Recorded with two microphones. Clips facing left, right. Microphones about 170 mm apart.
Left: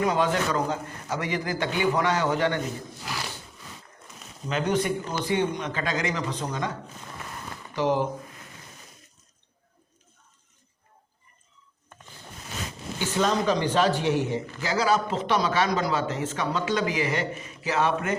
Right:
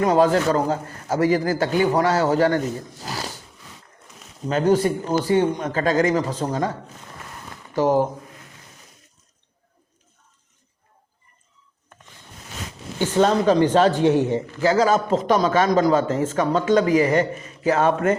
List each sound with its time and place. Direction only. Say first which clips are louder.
0.0 s a man's voice: right 7 dB; 40° right (ahead or behind)
3.0 s a sound: right 4 dB; 40° right (ahead or behind)
4.4 s a man's voice: right 7 dB; 40° right (ahead or behind)
7.8 s a man's voice: right 6 dB; 45° right (ahead or behind)
13.0 s a man's voice: right 7 dB; 50° right (ahead or behind)